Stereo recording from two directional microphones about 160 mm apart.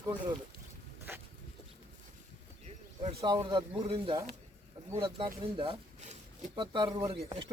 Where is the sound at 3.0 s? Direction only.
30° right (ahead or behind).